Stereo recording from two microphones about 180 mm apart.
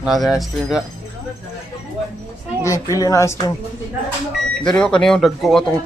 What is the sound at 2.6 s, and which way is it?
Speech, 20° left (ahead or behind).